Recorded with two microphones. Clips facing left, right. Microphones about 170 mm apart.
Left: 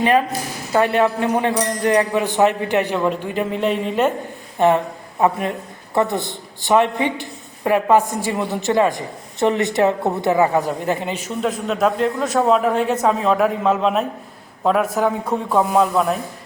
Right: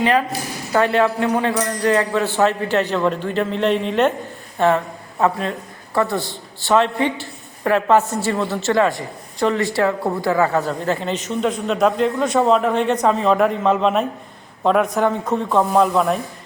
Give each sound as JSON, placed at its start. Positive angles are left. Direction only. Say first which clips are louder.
{"t": 0.7, "sound": "a man's voice", "louder": "even", "side_deg": 15}
{"t": 4.5, "sound": "a man's voice", "louder": "left 1 dB", "side_deg": 15}